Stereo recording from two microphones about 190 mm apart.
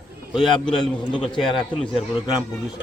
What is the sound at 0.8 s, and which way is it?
Speech, 25° left (ahead or behind).